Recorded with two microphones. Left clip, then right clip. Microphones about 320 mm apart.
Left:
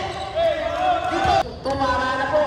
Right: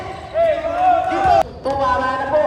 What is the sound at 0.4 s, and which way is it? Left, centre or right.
Basketball bounce, right.